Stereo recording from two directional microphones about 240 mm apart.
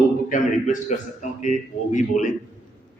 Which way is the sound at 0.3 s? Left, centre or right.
Left.